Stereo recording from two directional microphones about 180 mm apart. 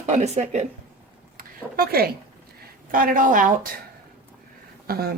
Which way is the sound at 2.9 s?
50° right (ahead or behind).